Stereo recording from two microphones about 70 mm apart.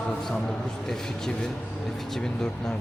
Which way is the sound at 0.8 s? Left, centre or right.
Centre.